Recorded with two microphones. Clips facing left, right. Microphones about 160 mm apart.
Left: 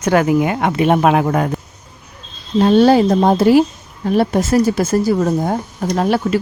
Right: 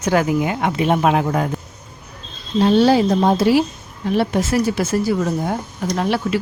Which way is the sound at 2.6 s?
50° left (ahead or behind).